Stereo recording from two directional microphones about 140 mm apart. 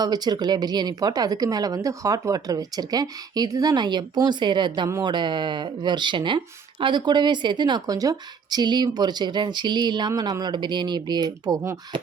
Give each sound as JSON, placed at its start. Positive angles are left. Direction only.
{"t": 0.0, "sound": "speech", "side_deg": -30}
{"t": 4.9, "sound": "speech", "side_deg": -20}
{"t": 5.1, "sound": "speech", "side_deg": -35}